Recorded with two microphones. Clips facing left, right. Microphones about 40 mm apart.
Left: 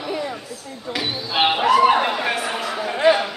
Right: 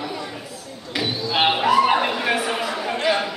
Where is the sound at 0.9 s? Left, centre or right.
Centre.